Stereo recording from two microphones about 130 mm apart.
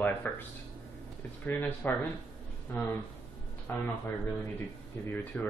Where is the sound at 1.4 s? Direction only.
15° left (ahead or behind).